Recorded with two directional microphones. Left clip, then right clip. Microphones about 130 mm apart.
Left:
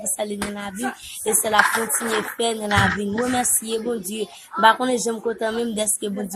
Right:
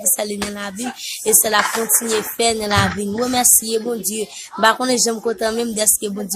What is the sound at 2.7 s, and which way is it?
Speech, 30° right (ahead or behind).